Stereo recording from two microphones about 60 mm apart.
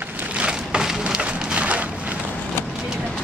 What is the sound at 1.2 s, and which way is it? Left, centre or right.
Rain, right.